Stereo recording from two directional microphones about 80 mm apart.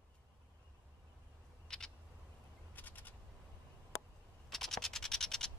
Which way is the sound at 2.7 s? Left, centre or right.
Left.